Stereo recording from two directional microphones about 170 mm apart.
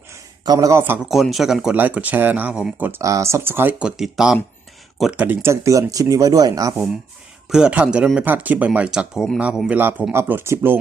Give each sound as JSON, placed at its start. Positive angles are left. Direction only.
{"t": 0.1, "sound": "a sound", "side_deg": -20}
{"t": 1.0, "sound": "speech", "side_deg": 0}
{"t": 7.5, "sound": "speech", "side_deg": -5}